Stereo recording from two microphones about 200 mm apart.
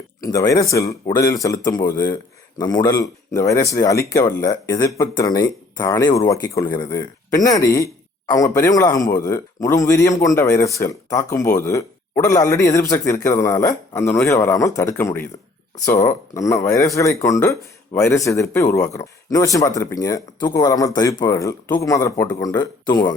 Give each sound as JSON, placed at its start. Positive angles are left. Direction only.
{"t": 0.2, "sound": "speech", "side_deg": 15}